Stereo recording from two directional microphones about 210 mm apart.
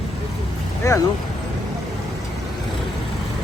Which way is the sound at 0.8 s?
15° left (ahead or behind).